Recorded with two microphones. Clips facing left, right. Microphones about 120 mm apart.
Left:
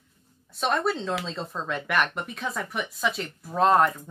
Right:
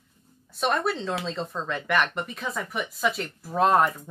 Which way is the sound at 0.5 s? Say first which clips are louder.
Even; centre (ahead or behind).